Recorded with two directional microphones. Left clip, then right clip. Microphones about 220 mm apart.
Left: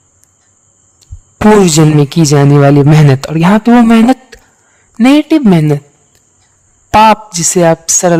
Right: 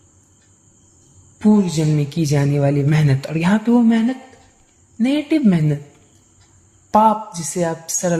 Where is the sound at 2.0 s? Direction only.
40° left (ahead or behind).